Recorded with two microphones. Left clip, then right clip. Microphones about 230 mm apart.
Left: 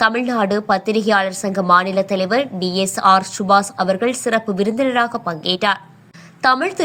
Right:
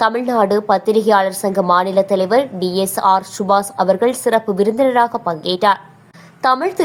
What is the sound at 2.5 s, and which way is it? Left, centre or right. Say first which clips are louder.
Speech: right 2 dB; left.